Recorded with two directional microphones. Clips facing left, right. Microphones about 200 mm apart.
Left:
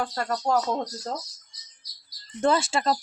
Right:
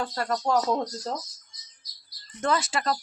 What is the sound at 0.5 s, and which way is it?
Speech, 30° left (ahead or behind).